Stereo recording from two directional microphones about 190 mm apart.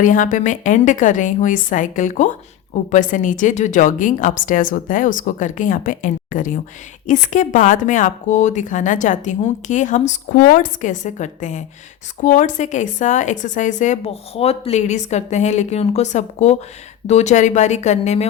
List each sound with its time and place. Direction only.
0.0 s a woman's voice: 45° left (ahead or behind)